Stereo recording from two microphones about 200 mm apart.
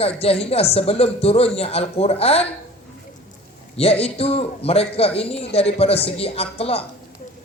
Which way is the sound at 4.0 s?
30° left (ahead or behind).